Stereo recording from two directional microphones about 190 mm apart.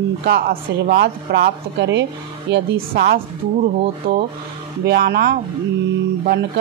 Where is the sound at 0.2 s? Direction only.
55° right (ahead or behind).